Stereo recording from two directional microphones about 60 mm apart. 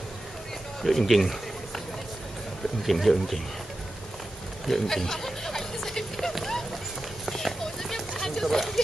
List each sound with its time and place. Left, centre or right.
0.8 s speech: centre
2.8 s speech: centre
4.6 s music: centre
6.3 s run: centre
7.2 s clip-clop: centre